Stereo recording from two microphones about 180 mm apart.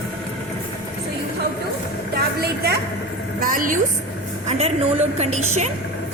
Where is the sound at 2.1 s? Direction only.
60° right (ahead or behind).